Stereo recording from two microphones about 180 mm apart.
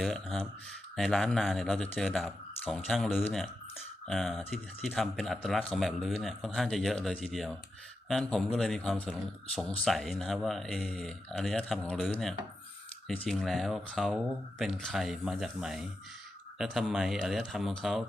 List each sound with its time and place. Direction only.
0.0 s a man's voice: centre (ahead or behind)